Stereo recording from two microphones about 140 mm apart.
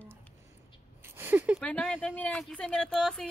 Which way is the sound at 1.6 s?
10° left (ahead or behind).